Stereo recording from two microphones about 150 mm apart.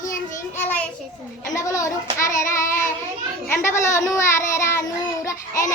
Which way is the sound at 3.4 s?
15° left (ahead or behind).